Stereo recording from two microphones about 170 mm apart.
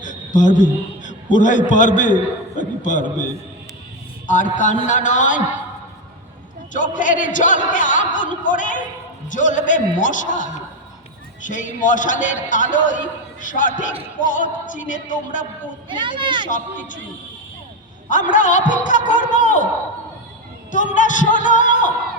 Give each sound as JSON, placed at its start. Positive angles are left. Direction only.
{"t": 0.0, "sound": "a man's voice", "side_deg": 50}
{"t": 4.5, "sound": "a man's voice", "side_deg": 50}
{"t": 6.9, "sound": "a man's voice", "side_deg": 50}
{"t": 15.9, "sound": "speech", "side_deg": -30}
{"t": 18.1, "sound": "a man's voice", "side_deg": 50}
{"t": 20.7, "sound": "a man's voice", "side_deg": 50}